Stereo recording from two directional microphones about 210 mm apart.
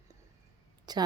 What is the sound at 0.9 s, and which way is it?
Speech, 20° right (ahead or behind).